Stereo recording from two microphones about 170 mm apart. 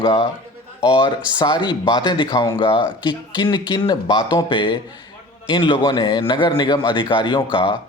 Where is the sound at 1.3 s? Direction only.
25° left (ahead or behind).